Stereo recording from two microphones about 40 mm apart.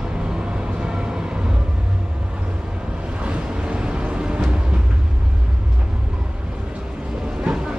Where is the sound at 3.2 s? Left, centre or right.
Right.